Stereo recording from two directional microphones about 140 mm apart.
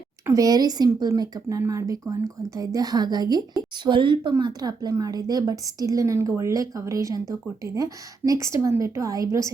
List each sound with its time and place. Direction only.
0.3 s a woman's voice: 25° right (ahead or behind)